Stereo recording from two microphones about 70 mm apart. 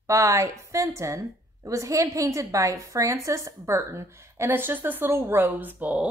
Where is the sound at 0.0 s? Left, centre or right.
Right.